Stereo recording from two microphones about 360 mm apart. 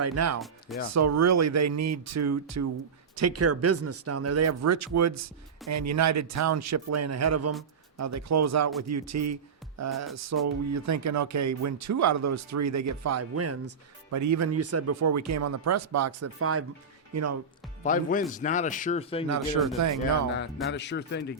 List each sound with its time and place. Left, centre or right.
0.0 s speech: right
17.8 s speech: left
20.0 s speech: left